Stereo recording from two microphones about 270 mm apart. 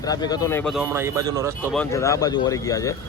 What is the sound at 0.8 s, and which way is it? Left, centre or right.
Speech, centre.